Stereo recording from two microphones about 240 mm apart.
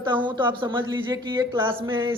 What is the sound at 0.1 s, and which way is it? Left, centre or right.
A woman's voice, centre.